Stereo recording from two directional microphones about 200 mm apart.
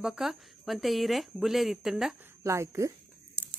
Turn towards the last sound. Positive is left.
turn(degrees=-10)  # may be behind; listen again after turning